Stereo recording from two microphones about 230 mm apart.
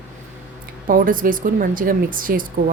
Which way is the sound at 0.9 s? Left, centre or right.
Right.